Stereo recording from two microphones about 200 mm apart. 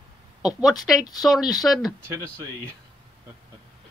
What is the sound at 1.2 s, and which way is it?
Speech, centre (ahead or behind).